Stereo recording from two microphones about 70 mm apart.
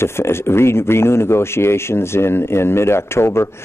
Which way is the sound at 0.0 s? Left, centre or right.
Left.